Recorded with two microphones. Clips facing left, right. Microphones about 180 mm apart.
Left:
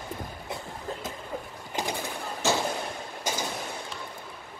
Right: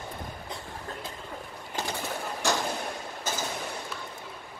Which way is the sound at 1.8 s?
15° left (ahead or behind).